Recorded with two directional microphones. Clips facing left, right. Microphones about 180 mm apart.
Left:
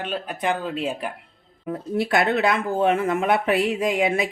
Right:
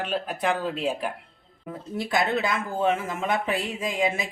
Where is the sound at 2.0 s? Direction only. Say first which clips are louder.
Left 4 dB; 65° left (ahead or behind).